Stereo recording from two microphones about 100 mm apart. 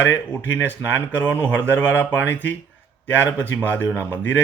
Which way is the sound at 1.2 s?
15° left (ahead or behind).